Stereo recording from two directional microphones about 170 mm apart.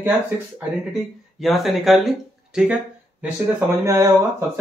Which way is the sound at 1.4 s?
Centre (ahead or behind).